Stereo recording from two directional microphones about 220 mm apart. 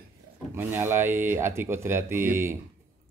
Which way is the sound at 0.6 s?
10° right (ahead or behind).